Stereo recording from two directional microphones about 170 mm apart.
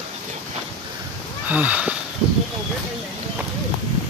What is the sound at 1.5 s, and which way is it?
Speech, 10° right (ahead or behind).